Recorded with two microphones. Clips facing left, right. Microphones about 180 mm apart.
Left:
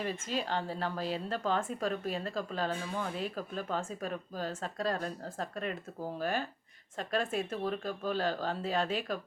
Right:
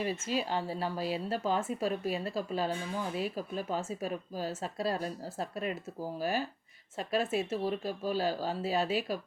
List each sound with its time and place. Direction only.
0.0 s speech: 10° right (ahead or behind)